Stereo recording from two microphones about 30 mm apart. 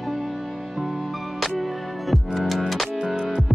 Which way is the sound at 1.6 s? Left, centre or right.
Centre.